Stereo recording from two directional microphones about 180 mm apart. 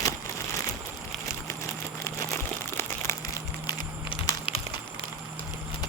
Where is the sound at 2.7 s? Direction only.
15° left (ahead or behind).